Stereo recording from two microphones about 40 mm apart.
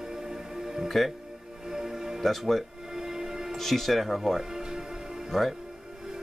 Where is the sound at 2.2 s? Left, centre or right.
Centre.